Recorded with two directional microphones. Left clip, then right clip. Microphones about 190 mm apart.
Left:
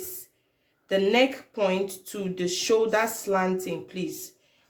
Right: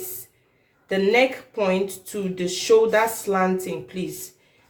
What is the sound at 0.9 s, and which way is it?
Speech, 35° left (ahead or behind).